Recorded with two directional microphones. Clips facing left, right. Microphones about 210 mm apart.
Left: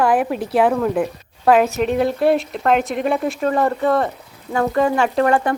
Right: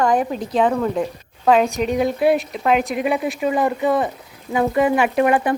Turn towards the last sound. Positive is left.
turn(degrees=-15)  # may be behind; listen again after turning